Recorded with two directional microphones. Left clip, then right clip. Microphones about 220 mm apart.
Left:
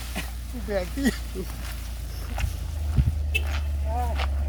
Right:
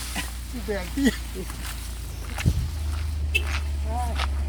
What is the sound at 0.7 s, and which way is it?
Speech, 25° left (ahead or behind).